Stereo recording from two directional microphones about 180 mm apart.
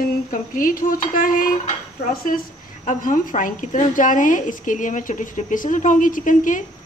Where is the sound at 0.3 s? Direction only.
50° left (ahead or behind).